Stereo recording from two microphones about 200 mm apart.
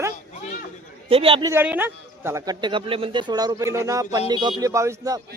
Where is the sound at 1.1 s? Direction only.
30° right (ahead or behind).